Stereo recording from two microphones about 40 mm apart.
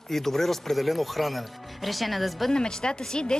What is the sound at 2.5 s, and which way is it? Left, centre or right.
Speech, centre.